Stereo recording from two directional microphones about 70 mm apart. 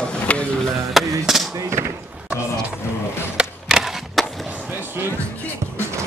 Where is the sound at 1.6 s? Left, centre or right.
Right.